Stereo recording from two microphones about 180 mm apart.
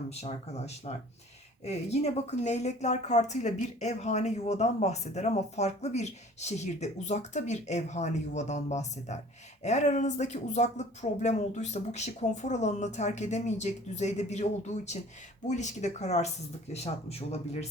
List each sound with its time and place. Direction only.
0.1 s a woman's voice: 35° left (ahead or behind)
15.4 s a woman's voice: 40° left (ahead or behind)